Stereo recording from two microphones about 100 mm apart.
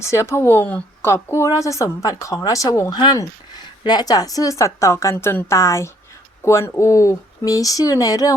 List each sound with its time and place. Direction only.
0.0 s speech: 30° left (ahead or behind)
1.0 s speech: 30° left (ahead or behind)
2.9 s speech: 45° left (ahead or behind)